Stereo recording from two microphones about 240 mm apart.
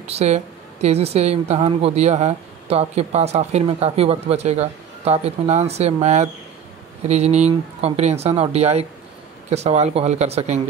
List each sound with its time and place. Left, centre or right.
0.0 s speech: right